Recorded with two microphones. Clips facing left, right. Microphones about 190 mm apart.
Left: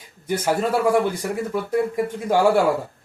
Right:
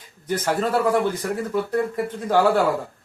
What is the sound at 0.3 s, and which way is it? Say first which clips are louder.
Speech: left 1 dB; 10° left (ahead or behind).